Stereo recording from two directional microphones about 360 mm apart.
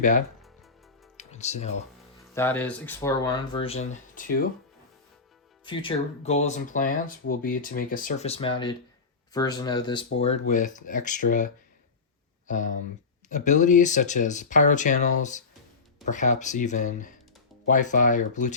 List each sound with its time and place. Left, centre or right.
1.1 s music: centre
2.3 s speech: centre; by 4.4 s left
5.6 s speech: centre